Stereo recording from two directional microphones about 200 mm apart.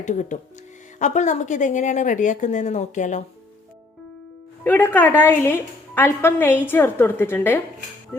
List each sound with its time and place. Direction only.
0.0 s a woman's voice: 40° left (ahead or behind)
4.6 s a woman's voice: 10° left (ahead or behind)